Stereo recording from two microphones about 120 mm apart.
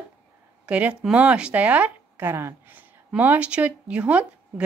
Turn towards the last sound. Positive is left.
turn(degrees=-10)  # may be behind; listen again after turning